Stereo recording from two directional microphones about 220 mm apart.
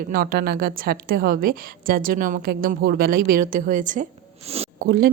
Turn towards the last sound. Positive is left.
turn(degrees=-40)  # may be behind; listen again after turning